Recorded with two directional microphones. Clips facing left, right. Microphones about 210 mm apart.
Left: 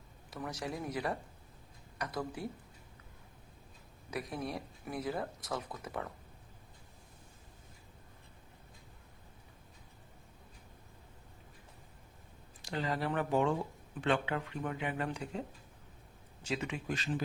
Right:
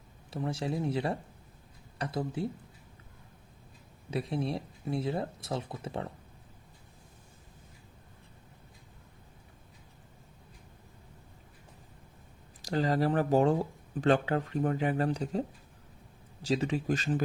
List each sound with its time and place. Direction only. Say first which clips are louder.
0.3 s speech: right 6 dB; 30° right (ahead or behind)
4.1 s speech: right 6 dB; 30° right (ahead or behind)
12.6 s speech: right 7 dB; 40° right (ahead or behind)